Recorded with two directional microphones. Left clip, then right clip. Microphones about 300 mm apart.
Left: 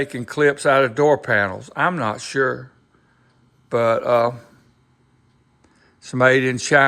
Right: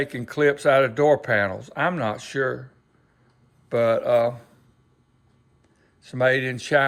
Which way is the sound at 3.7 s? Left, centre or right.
Centre.